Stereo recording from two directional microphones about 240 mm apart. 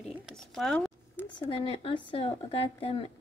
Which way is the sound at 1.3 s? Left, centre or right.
Centre.